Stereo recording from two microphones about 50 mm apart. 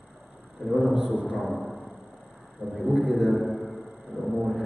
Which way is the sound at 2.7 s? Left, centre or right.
Centre.